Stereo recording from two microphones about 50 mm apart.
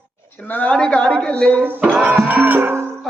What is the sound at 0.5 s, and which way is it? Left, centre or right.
Speech, left.